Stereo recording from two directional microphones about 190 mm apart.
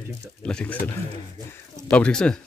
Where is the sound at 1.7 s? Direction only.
5° left (ahead or behind).